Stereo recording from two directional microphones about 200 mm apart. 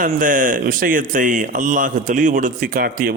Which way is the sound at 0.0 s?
40° right (ahead or behind).